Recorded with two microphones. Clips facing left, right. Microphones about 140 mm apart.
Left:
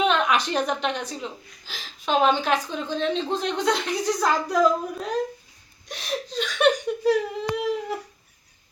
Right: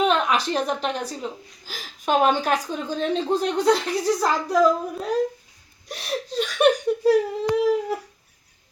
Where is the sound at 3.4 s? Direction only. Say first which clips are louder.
Right 5 dB; 35° right (ahead or behind).